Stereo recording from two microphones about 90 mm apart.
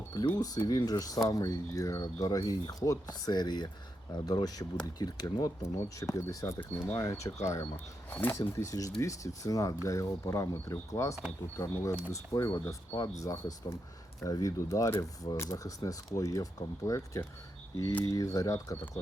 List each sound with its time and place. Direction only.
0.3 s speech: 45° left (ahead or behind)
6.6 s speech: 20° left (ahead or behind)
7.0 s speech: 35° left (ahead or behind)
8.1 s speech: 20° left (ahead or behind)
8.4 s speech: 40° left (ahead or behind)